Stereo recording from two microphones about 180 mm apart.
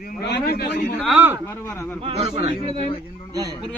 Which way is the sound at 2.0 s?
35° right (ahead or behind).